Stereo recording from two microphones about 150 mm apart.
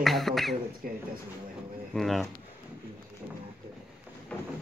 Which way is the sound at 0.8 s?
70° right (ahead or behind).